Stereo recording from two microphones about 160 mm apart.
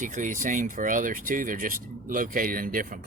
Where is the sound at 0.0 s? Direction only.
55° right (ahead or behind).